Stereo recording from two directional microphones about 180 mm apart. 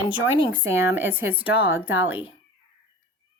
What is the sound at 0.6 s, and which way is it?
Speech, 15° right (ahead or behind).